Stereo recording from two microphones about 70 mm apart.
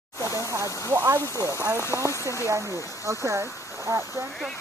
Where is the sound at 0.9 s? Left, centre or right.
Right.